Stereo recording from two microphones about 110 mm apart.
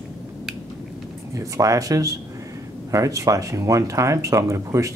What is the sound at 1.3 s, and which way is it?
Speech, 30° right (ahead or behind).